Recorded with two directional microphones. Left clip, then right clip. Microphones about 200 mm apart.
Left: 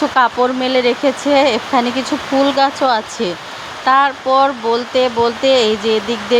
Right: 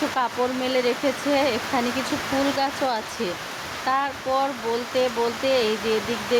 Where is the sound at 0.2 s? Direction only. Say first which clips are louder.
Left 13 dB; 30° left (ahead or behind).